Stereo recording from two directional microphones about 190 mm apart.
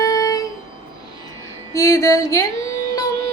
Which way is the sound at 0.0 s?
15° left (ahead or behind).